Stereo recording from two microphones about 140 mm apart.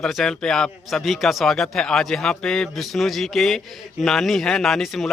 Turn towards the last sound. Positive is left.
turn(degrees=0)  # may be behind; listen again after turning